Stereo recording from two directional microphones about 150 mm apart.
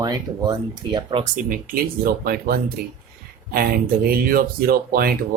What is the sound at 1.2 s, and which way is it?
Speech, 60° right (ahead or behind).